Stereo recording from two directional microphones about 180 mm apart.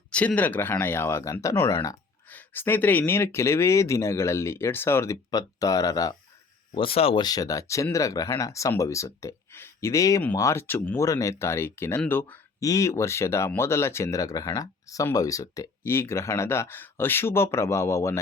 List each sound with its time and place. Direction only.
0.1 s speech: 5° left (ahead or behind)
6.7 s speech: 30° left (ahead or behind); by 18.2 s 15° left (ahead or behind)